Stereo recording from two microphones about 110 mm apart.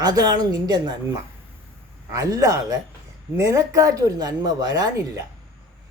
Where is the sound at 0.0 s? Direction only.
35° right (ahead or behind).